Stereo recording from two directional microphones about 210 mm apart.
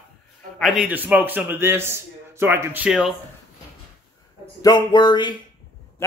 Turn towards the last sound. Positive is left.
turn(degrees=20)  # may be behind; listen again after turning